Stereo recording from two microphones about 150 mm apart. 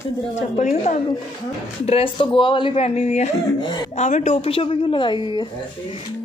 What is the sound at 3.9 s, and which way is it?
A woman's voice, 50° left (ahead or behind).